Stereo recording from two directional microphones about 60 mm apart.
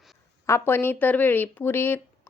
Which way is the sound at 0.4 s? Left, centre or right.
Left.